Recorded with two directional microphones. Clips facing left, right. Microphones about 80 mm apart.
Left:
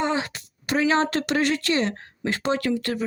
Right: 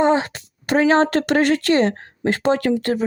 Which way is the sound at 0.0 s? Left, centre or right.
Right.